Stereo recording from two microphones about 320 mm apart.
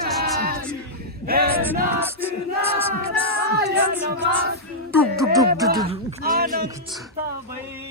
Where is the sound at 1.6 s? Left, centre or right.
Centre.